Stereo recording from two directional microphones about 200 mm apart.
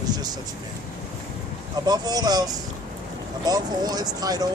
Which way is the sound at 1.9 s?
20° right (ahead or behind).